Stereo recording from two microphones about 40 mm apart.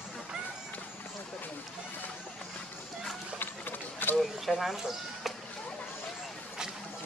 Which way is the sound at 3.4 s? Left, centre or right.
Left.